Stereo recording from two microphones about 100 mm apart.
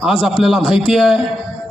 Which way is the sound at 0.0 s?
5° left (ahead or behind).